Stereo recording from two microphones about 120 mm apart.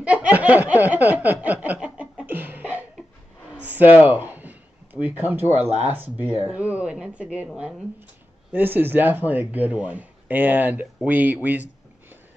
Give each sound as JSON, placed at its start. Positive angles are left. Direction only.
{"t": 0.0, "sound": "snicker", "side_deg": -10}
{"t": 3.6, "sound": "a sound", "side_deg": -15}
{"t": 5.6, "sound": "speech", "side_deg": -60}
{"t": 5.9, "sound": "speech", "side_deg": -15}